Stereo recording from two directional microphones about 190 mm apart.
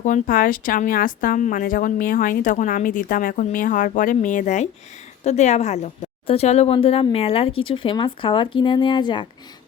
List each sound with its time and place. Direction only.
0.0 s a woman's voice: 45° left (ahead or behind); by 9.2 s 25° left (ahead or behind)